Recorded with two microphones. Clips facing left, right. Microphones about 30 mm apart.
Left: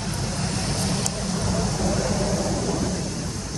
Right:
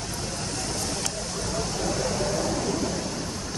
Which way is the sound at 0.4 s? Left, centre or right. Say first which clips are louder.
Left 4 dB; left.